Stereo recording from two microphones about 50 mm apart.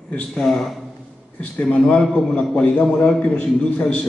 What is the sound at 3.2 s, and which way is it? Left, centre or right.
Speech, centre.